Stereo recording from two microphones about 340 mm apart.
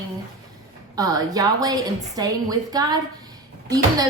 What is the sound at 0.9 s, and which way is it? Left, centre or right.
Speech, centre.